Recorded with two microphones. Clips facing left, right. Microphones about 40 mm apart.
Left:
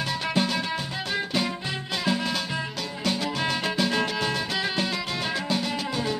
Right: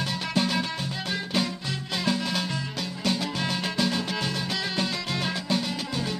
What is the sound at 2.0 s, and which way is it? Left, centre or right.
Music, centre.